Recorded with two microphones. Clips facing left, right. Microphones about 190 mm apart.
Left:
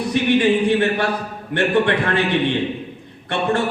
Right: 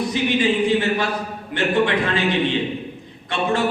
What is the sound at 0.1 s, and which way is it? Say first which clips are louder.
Speech: left 7 dB; 65° left (ahead or behind).